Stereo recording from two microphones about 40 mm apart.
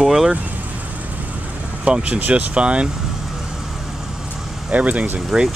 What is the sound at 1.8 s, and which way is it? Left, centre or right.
Speech, right.